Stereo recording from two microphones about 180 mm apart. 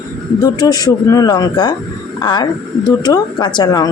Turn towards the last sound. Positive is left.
turn(degrees=20)  # may be behind; listen again after turning